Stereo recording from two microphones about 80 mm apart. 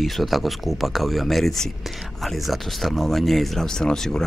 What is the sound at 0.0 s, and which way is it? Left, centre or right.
Speech, centre.